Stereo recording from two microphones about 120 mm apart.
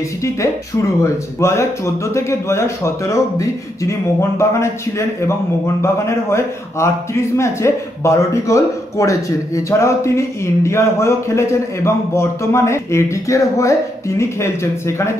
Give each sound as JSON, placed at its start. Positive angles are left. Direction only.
{"t": 1.0, "sound": "a man's voice", "side_deg": 25}